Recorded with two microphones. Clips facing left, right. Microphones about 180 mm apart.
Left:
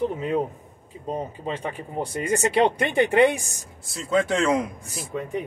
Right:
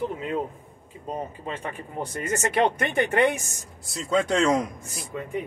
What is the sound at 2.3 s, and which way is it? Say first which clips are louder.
Speech: left 3 dB; 30° left (ahead or behind).